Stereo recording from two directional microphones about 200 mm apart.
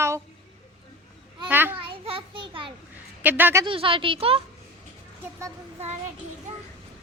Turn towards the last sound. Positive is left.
turn(degrees=-35)  # may be behind; listen again after turning